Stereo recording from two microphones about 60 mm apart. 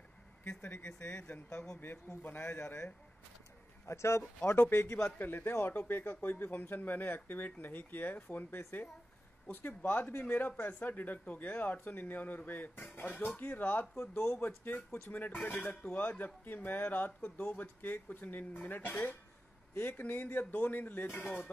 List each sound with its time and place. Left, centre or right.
0.4 s speech: left
3.8 s speech: left
4.2 s speech: centre
4.6 s speech: left